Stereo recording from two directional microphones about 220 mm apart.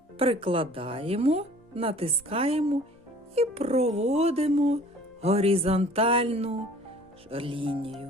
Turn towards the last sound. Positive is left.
turn(degrees=-25)  # may be behind; listen again after turning